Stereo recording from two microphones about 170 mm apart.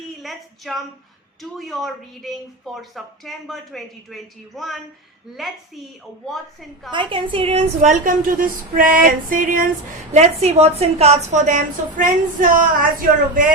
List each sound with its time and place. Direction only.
0.2 s speech: centre (ahead or behind)
6.9 s a woman's voice: 30° right (ahead or behind); by 9.6 s 55° right (ahead or behind)
10.1 s a woman's voice: 40° right (ahead or behind)